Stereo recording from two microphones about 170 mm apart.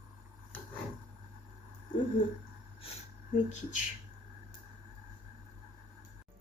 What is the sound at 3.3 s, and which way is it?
Speech, 45° left (ahead or behind).